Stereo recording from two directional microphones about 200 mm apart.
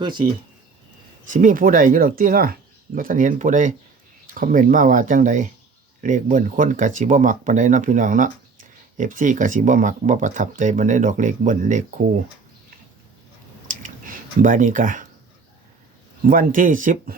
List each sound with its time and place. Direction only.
0.0 s speech: 25° right (ahead or behind)
1.3 s speech: 40° right (ahead or behind)
13.7 s a sound: 40° right (ahead or behind)
16.2 s speech: 45° right (ahead or behind)